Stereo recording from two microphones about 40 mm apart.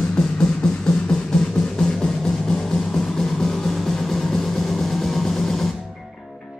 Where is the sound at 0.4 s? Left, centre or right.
Centre.